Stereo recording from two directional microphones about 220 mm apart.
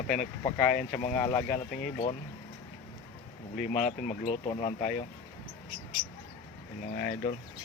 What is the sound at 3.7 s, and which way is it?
Speech, 35° left (ahead or behind).